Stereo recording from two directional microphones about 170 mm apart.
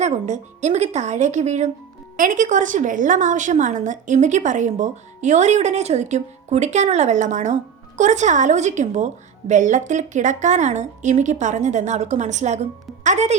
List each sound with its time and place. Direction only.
0.0 s a woman's voice: 45° right (ahead or behind)